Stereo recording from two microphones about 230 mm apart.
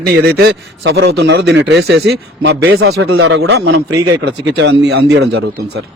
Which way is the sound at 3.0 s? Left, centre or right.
Right.